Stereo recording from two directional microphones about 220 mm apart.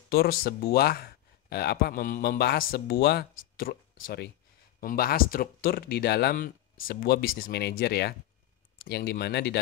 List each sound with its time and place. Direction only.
0.1 s speech: 45° left (ahead or behind)